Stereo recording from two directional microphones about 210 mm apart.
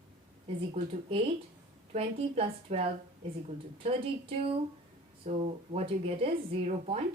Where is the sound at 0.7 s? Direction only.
25° right (ahead or behind).